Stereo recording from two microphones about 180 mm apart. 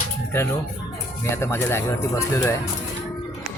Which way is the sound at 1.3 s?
15° left (ahead or behind).